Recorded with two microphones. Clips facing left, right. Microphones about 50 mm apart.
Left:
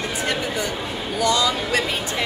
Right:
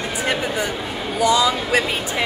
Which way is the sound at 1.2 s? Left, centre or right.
Centre.